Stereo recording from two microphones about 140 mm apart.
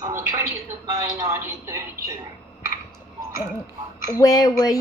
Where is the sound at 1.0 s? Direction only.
20° right (ahead or behind).